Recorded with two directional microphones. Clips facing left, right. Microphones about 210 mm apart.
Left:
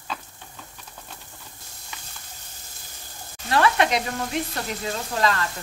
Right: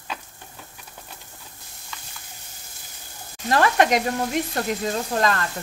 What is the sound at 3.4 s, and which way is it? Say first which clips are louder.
Frying: right 2 dB; 45° right (ahead or behind).